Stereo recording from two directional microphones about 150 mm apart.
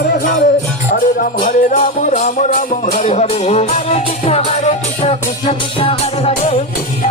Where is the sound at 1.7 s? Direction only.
55° left (ahead or behind).